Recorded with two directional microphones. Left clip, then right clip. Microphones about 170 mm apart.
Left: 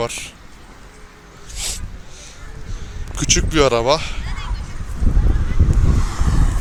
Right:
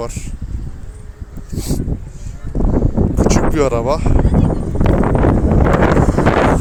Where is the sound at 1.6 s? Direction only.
10° right (ahead or behind).